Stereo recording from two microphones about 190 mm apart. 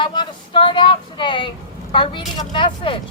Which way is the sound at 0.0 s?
25° left (ahead or behind).